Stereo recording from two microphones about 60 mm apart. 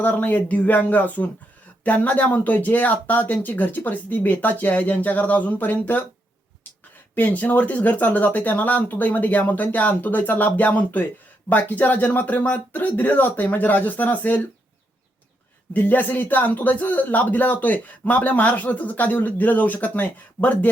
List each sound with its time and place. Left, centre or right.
0.0 s speech: left
7.2 s speech: left
15.7 s speech: left